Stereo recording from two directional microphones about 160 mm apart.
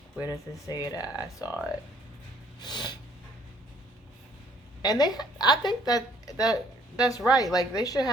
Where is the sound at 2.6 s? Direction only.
30° left (ahead or behind).